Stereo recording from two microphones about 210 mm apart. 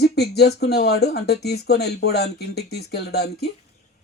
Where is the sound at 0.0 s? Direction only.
50° left (ahead or behind).